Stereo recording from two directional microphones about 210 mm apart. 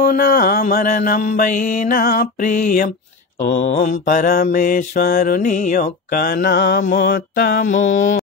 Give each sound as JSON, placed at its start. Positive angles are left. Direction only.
{"t": 0.0, "sound": "mantra", "side_deg": 40}